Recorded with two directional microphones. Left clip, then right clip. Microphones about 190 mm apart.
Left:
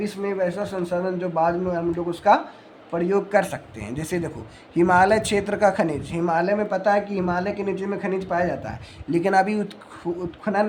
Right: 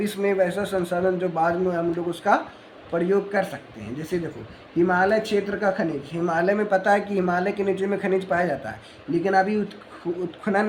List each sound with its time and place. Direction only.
0.0 s a man's voice: 5° left (ahead or behind); by 5.8 s 30° left (ahead or behind)
6.2 s speech: 15° left (ahead or behind)
9.1 s speech: 25° left (ahead or behind)
10.4 s speech: 10° left (ahead or behind)